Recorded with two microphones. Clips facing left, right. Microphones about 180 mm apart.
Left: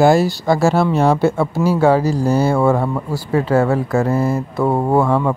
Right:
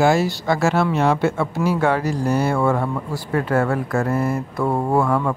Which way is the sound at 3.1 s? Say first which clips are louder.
Left 4 dB; 10° left (ahead or behind).